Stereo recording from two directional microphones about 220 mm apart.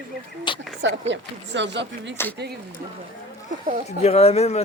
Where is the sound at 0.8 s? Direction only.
55° right (ahead or behind).